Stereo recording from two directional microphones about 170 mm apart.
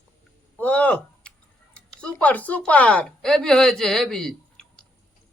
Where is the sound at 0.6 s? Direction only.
5° left (ahead or behind).